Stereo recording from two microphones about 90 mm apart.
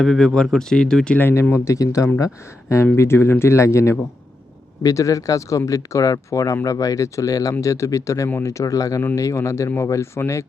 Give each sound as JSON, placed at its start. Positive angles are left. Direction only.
{"t": 0.0, "sound": "speech", "side_deg": 5}
{"t": 1.2, "sound": "speech", "side_deg": 25}